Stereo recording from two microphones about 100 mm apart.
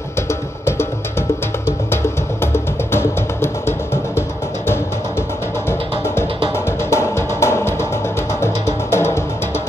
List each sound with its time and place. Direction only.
0.3 s music: 25° left (ahead or behind)
2.4 s music: 25° left (ahead or behind)
5.7 s music: 25° left (ahead or behind)